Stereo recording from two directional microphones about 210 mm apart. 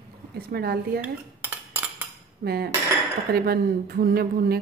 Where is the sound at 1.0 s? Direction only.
10° right (ahead or behind).